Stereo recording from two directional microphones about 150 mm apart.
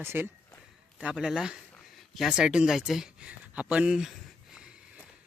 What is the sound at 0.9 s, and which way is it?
Speech, 5° right (ahead or behind).